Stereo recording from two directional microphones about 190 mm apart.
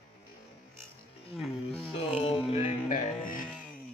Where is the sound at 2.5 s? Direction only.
40° left (ahead or behind).